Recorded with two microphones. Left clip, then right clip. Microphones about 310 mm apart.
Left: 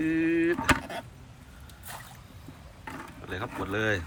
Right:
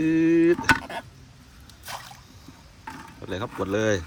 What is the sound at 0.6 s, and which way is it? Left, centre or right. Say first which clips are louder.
Speech: right 4 dB; centre.